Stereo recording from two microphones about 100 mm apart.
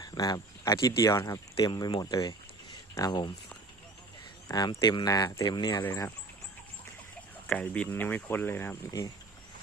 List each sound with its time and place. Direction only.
0.0 s speech: 40° left (ahead or behind)
4.4 s speech: 40° left (ahead or behind)
4.8 s speech: 50° left (ahead or behind)
5.0 s speech: 35° left (ahead or behind)
5.5 s speech: 50° left (ahead or behind)
7.5 s speech: 15° left (ahead or behind)
8.9 s speech: 35° left (ahead or behind)